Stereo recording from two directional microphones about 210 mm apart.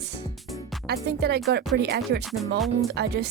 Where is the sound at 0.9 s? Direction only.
50° right (ahead or behind).